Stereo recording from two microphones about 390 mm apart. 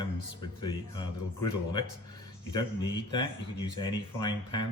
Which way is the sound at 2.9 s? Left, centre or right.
Centre.